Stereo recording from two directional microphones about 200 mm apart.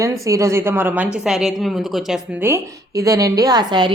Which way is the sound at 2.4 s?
15° right (ahead or behind).